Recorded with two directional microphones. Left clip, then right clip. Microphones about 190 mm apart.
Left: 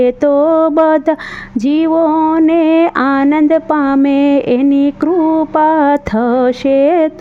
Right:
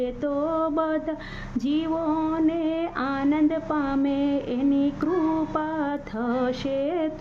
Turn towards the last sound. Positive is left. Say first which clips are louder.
# left 16 dB
turn(degrees=45)  # may be behind; listen again after turning